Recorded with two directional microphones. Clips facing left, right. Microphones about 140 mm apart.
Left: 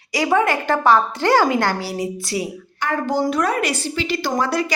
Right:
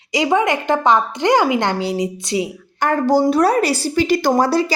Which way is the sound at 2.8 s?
40° right (ahead or behind).